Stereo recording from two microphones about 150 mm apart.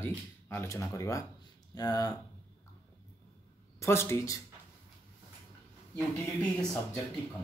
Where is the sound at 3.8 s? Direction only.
15° left (ahead or behind).